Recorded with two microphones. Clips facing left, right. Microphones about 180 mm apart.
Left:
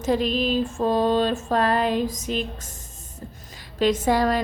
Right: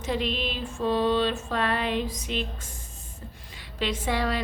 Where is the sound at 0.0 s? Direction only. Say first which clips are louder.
Left 6 dB; 40° left (ahead or behind).